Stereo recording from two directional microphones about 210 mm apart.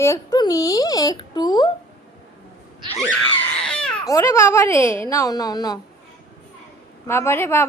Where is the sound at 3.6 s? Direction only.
5° left (ahead or behind).